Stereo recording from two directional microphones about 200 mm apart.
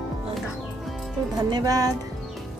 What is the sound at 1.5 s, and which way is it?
Speech, 20° right (ahead or behind).